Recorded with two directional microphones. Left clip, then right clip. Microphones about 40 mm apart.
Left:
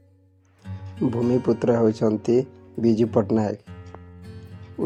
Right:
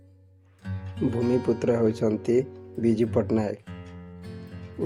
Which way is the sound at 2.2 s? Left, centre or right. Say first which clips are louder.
Left 3 dB; left.